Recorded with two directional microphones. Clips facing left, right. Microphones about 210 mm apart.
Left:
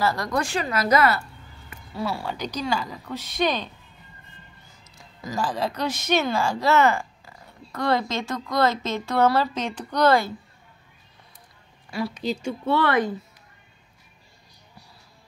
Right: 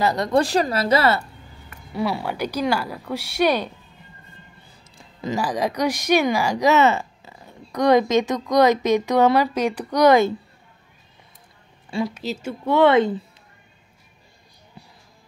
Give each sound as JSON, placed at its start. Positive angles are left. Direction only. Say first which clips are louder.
{"t": 0.0, "sound": "a woman's voice", "louder": "right 4 dB", "side_deg": -20}
{"t": 0.4, "sound": "speech", "louder": "right 8 dB", "side_deg": -35}
{"t": 2.0, "sound": "speech", "louder": "right 5 dB", "side_deg": -15}
{"t": 4.6, "sound": "a sound", "louder": "right 2 dB", "side_deg": -30}
{"t": 5.3, "sound": "speech", "louder": "right 3 dB", "side_deg": -15}
{"t": 12.1, "sound": "speech", "louder": "left 1 dB", "side_deg": -5}
{"t": 12.7, "sound": "a woman's voice", "louder": "right 7 dB", "side_deg": -25}